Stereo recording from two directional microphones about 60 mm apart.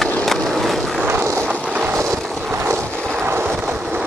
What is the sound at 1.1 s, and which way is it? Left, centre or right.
Vehicle, right.